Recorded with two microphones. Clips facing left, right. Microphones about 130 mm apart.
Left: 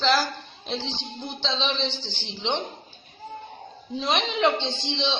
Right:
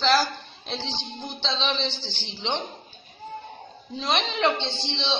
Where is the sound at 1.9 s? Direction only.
40° right (ahead or behind).